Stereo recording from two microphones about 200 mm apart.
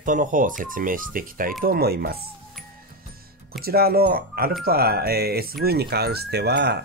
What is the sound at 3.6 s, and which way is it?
Speech, 50° right (ahead or behind).